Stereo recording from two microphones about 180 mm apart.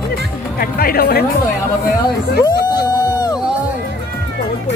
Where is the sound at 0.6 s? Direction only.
55° left (ahead or behind).